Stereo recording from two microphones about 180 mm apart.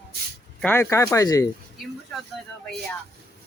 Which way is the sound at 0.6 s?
10° left (ahead or behind).